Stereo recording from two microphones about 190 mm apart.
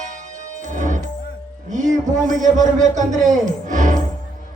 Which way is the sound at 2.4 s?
40° right (ahead or behind).